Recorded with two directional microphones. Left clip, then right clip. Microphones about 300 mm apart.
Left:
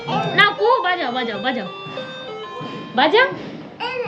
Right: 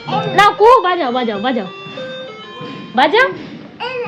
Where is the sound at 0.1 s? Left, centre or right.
Centre.